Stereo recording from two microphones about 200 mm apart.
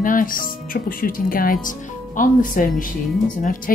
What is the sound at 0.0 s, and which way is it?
A woman's voice, 40° left (ahead or behind).